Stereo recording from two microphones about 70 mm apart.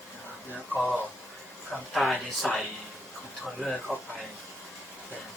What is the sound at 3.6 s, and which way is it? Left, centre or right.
Speech, centre.